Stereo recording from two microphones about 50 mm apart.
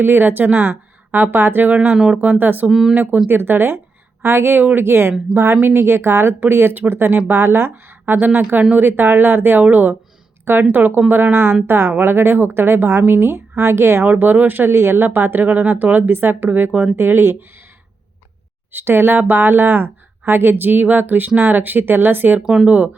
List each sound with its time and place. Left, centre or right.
0.0 s speech: right
1.7 s speech: right
2.4 s a woman's voice: right
2.6 s speech: centre
2.9 s speech: right
6.4 s speech: right
8.0 s a woman's voice: right
14.0 s speech: right
15.4 s speech: right
18.7 s speech: right
22.4 s speech: centre